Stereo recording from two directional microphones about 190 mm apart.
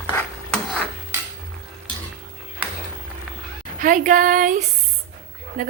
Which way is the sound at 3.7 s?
45° right (ahead or behind).